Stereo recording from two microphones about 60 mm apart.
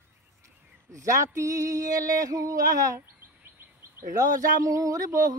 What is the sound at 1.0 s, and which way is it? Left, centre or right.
Music, right.